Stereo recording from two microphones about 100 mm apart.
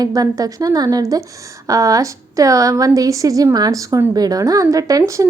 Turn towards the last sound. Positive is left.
turn(degrees=-35)  # may be behind; listen again after turning